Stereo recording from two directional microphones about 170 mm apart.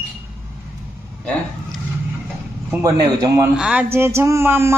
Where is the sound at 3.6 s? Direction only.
5° right (ahead or behind).